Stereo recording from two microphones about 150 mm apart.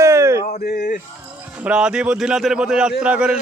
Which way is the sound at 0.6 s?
75° left (ahead or behind).